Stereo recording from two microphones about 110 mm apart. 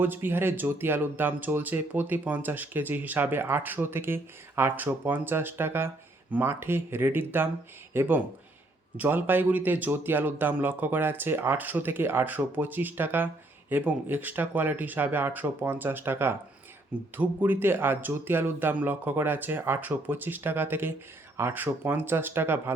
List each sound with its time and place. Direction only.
0.0 s speech: 20° right (ahead or behind)